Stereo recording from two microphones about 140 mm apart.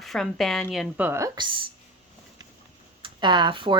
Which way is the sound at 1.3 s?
35° right (ahead or behind).